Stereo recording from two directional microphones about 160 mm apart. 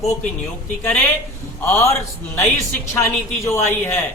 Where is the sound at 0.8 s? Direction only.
10° left (ahead or behind).